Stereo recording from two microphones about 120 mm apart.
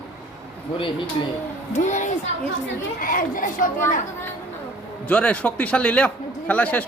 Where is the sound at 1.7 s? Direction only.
85° left.